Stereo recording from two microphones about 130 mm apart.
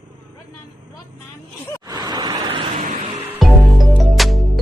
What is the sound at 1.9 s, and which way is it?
Vehicle, 30° right (ahead or behind).